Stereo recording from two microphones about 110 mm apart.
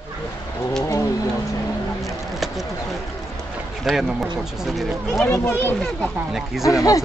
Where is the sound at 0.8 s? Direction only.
30° left (ahead or behind).